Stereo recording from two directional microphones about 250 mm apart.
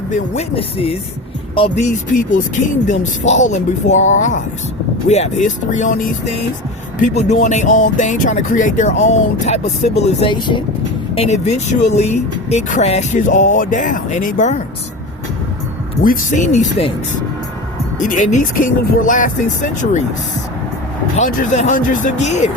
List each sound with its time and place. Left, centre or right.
0.1 s speech: left
16.0 s speech: left
18.0 s speech: left
21.2 s speech: left